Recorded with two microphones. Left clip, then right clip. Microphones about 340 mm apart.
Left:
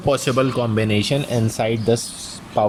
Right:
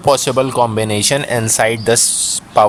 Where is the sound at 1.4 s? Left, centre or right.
Centre.